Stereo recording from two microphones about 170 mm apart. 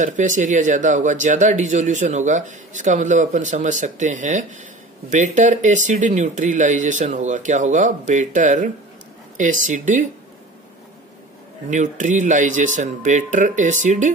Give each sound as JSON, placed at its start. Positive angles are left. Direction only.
{"t": 0.0, "sound": "speech", "side_deg": -50}
{"t": 11.7, "sound": "speech", "side_deg": -45}